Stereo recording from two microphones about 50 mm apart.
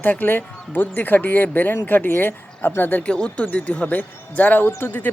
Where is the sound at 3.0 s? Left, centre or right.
Left.